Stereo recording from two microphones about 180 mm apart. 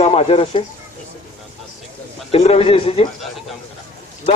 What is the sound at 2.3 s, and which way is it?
Speech, 35° left (ahead or behind).